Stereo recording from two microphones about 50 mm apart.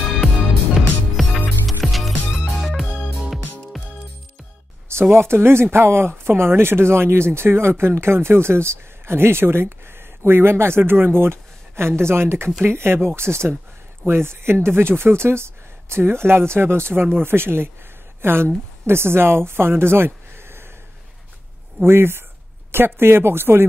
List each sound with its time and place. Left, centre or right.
1.2 s music: centre
2.9 s music: left
5.1 s a woman's voice: right
20.3 s a sound: right
21.8 s speech: right